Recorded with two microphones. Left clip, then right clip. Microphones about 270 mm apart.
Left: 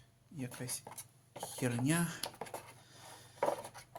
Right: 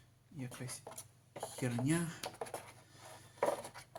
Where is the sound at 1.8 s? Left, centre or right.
Left.